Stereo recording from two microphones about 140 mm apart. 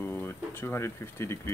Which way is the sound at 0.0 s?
15° left (ahead or behind).